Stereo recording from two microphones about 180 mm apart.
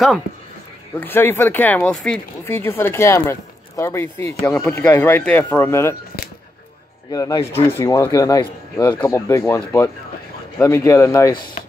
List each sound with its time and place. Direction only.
0.9 s speech: 10° left (ahead or behind)
7.1 s speech: 20° left (ahead or behind)
10.6 s speech: 15° left (ahead or behind)
11.3 s speech: 55° left (ahead or behind)